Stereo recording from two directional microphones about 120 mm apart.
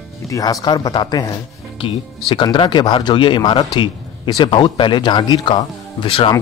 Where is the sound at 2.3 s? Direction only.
40° left (ahead or behind).